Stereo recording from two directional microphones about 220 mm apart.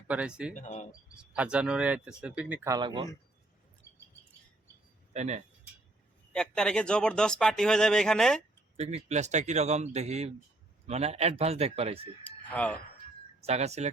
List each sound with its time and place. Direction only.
0.1 s speech: 5° right (ahead or behind)
0.5 s speech: 35° left (ahead or behind)
1.1 s speech: 5° right (ahead or behind); by 3.1 s 20° right (ahead or behind)
5.1 s speech: 30° right (ahead or behind)
6.3 s speech: 5° left (ahead or behind)
8.7 s speech: 30° right (ahead or behind)
12.2 s a sound: 5° left (ahead or behind)
13.4 s speech: 30° right (ahead or behind)